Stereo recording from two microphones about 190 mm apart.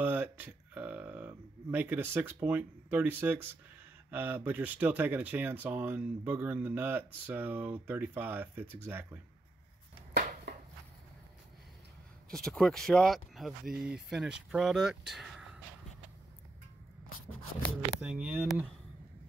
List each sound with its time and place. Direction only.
0.0 s speech: 10° right (ahead or behind)
10.1 s a sound: 55° right (ahead or behind)
12.4 s speech: centre (ahead or behind)
18.0 s speech: 10° right (ahead or behind)